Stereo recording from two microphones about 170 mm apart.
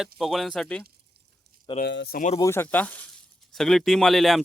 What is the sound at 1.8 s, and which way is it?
Speech, 80° left.